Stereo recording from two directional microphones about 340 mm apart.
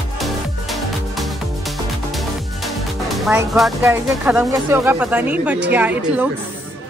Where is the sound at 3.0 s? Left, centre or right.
Centre.